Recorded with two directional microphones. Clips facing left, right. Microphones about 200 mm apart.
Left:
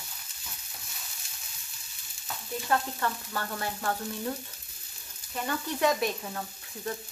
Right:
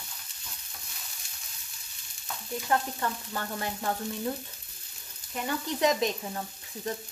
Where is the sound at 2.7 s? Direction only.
20° right (ahead or behind).